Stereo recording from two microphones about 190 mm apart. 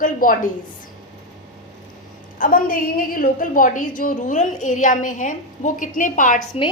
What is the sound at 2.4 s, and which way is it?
A woman's voice, 50° left (ahead or behind).